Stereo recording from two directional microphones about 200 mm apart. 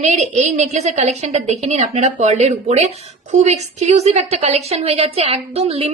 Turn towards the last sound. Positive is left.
turn(degrees=-30)  # may be behind; listen again after turning